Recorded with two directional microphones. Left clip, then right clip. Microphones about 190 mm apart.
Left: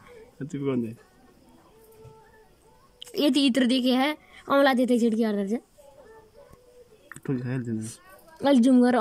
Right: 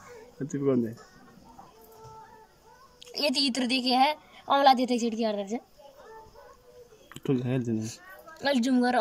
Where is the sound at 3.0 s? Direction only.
40° left (ahead or behind).